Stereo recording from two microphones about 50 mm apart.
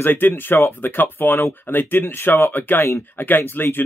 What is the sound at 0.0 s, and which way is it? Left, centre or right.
Speech, left.